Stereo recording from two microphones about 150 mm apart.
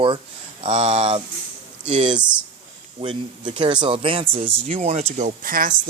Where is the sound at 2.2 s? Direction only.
10° right (ahead or behind).